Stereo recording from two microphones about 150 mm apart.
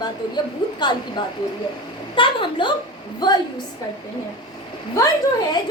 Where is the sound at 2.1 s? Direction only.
35° left (ahead or behind).